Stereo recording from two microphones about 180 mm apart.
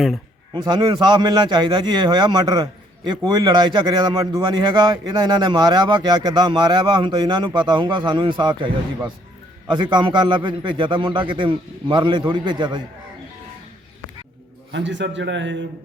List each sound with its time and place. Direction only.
0.5 s a man's voice: 25° right (ahead or behind)
14.7 s a man's voice: 85° right